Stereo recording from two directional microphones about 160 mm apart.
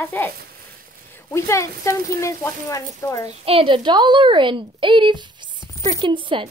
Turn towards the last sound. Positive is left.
turn(degrees=-30)  # may be behind; listen again after turning